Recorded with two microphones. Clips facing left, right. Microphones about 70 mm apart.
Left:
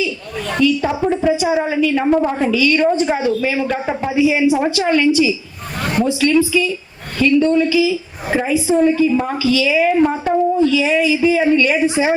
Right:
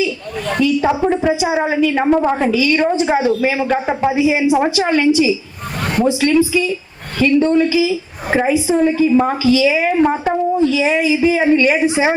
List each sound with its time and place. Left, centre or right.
0.6 s a woman's voice: right